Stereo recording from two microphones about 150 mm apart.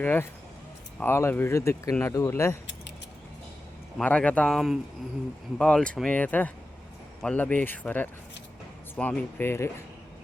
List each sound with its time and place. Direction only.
0.0 s speech: 15° left (ahead or behind)
3.9 s speech: 10° left (ahead or behind)